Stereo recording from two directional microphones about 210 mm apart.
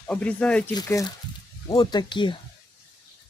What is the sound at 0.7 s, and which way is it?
Speech, 15° left (ahead or behind).